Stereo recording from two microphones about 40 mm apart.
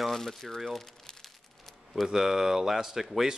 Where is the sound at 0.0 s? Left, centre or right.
Centre.